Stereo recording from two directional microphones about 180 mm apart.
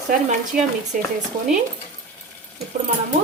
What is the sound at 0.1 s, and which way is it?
Speech, 50° right (ahead or behind).